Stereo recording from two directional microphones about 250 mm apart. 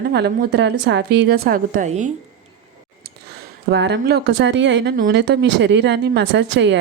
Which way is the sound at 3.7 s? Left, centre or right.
Right.